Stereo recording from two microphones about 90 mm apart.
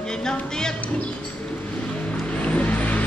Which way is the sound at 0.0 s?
5° left (ahead or behind).